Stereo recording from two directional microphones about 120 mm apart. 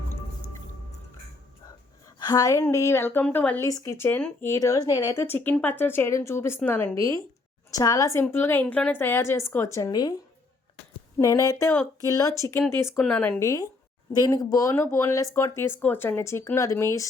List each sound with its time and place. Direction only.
2.1 s speech: 35° left (ahead or behind); by 3.7 s 15° left (ahead or behind)
3.7 s speech: 30° left (ahead or behind)
3.9 s speech: 15° left (ahead or behind); by 10.2 s 35° left (ahead or behind)
11.2 s speech: 25° left (ahead or behind)
13.0 s speech: 10° left (ahead or behind)
13.4 s speech: 25° left (ahead or behind)